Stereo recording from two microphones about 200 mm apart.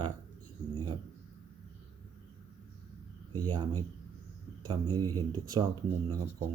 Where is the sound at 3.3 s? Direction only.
20° right (ahead or behind).